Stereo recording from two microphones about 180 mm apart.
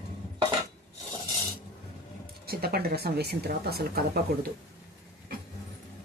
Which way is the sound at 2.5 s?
60° right (ahead or behind).